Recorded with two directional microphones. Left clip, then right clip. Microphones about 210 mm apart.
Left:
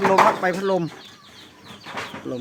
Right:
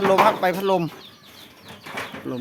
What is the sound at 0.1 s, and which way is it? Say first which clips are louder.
Speech: right 1 dB; 30° right (ahead or behind).